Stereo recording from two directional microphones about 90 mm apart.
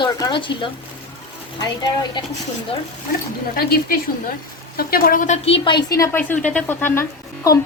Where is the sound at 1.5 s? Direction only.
50° left (ahead or behind).